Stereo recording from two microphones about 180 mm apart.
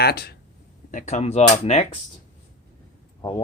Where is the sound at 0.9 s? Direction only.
40° left (ahead or behind).